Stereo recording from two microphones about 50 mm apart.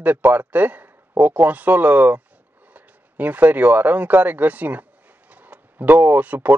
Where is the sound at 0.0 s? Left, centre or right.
Right.